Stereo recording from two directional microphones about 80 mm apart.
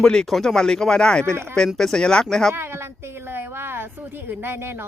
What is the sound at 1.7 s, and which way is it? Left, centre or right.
Speech, centre.